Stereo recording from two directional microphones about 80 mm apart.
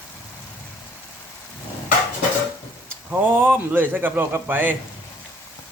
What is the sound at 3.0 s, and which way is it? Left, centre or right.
A man's voice, right.